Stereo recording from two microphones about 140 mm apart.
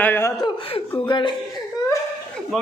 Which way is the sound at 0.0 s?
15° left (ahead or behind).